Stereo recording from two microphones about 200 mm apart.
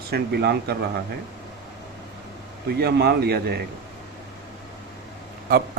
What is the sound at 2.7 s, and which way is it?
Speech, 55° right (ahead or behind).